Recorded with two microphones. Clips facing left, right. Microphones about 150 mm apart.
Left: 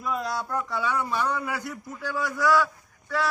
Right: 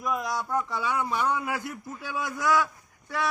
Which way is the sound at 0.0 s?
15° right (ahead or behind).